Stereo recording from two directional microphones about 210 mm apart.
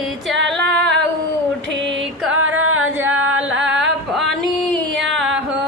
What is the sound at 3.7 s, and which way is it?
Female singing, centre (ahead or behind).